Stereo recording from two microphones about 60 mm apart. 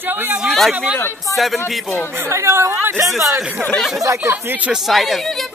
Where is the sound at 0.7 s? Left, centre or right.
Centre.